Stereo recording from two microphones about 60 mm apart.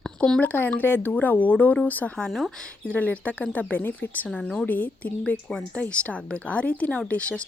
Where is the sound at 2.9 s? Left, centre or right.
Left.